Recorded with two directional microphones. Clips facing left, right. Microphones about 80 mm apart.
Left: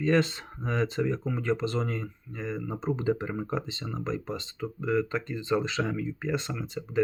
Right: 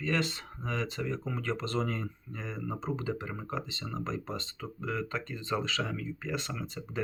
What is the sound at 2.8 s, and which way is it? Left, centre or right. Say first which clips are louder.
Speech: left 9 dB; left.